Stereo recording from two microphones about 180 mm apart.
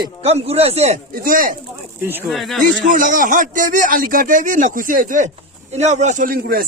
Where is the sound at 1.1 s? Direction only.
50° right (ahead or behind).